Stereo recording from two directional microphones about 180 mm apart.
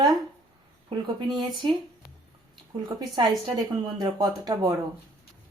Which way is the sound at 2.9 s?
25° right (ahead or behind).